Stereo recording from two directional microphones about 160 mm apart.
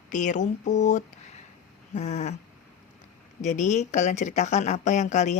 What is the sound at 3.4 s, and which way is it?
A woman's voice, 50° left (ahead or behind).